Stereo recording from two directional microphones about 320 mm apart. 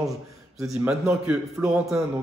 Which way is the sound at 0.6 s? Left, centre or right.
Centre.